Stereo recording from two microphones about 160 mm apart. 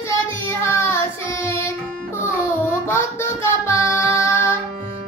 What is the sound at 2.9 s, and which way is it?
Music, 15° left (ahead or behind).